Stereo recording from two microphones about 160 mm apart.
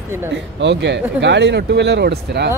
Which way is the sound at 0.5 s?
90° right.